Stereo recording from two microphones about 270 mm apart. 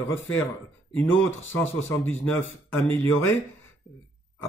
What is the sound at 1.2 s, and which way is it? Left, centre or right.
Speech, left.